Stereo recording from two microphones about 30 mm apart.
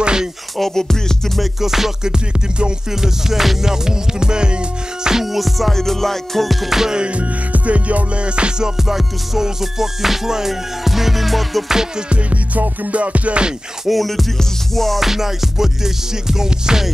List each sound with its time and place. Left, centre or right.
0.0 s music: right
0.6 s music: centre
1.6 s music: centre
2.0 s music: right
2.9 s music: centre
3.7 s music: right
5.1 s music: centre
5.7 s music: centre
7.0 s music: right
8.5 s music: right
9.4 s music: centre
12.3 s music: right
13.8 s music: centre
15.0 s music: centre